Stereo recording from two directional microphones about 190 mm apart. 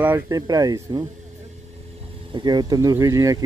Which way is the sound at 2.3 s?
20° right (ahead or behind).